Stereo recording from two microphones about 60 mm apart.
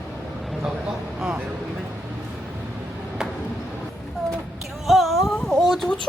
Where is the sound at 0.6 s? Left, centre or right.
Centre.